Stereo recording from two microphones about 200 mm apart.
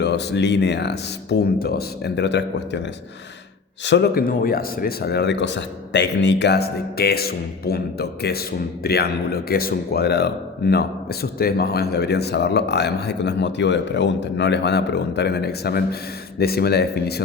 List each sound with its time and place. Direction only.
0.0 s speech: 55° left (ahead or behind)
3.8 s speech: 55° left (ahead or behind)